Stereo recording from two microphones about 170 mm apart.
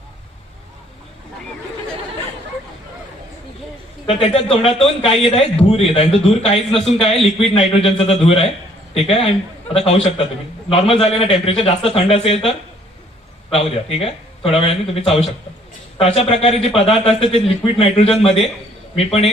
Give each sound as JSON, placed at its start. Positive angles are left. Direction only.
{"t": 4.0, "sound": "a man's voice", "side_deg": 35}